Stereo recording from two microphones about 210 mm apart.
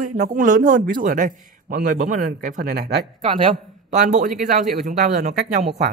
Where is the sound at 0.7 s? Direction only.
40° right (ahead or behind).